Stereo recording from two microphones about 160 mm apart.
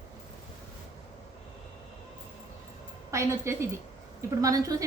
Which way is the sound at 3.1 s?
15° right (ahead or behind).